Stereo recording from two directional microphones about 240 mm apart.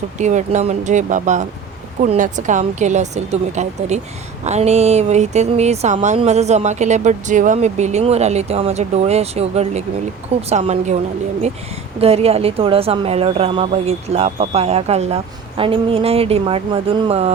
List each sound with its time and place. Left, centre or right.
0.2 s speech: right
11.9 s speech: right